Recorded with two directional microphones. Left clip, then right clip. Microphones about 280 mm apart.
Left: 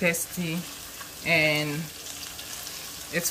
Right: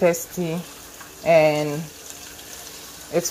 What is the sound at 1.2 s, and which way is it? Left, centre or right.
Speech, centre.